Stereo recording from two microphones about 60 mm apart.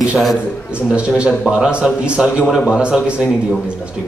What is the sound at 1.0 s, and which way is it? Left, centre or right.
A man's voice, centre.